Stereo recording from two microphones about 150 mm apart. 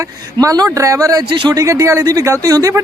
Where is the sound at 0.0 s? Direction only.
25° right (ahead or behind).